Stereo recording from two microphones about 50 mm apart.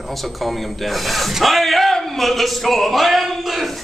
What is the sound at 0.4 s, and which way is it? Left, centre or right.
A man's voice, centre.